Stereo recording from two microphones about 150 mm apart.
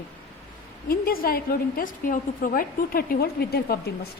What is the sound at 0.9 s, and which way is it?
A woman's voice, 75° left (ahead or behind).